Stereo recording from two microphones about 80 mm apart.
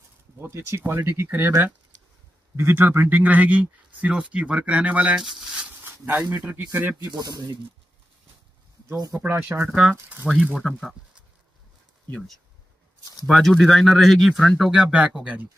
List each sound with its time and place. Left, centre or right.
0.4 s speech: right
2.5 s a man's voice: right
5.2 s a sound: centre
5.9 s a man's voice: right
7.1 s speech: right
9.1 s speech: right
9.5 s a man's voice: right
10.2 s speech: centre
10.5 s speech: centre
13.3 s speech: centre